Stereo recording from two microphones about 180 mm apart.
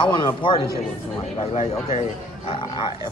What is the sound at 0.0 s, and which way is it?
Speech, 25° left (ahead or behind).